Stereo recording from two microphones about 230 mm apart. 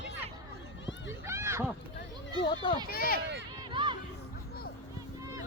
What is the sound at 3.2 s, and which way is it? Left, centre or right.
Speech, right.